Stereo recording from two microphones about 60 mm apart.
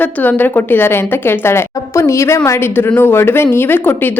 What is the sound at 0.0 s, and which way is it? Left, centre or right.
A woman's voice, left.